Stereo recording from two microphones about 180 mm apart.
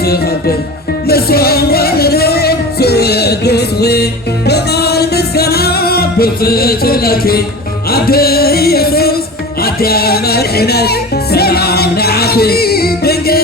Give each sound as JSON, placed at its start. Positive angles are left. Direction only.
{"t": 0.0, "sound": "music", "side_deg": 60}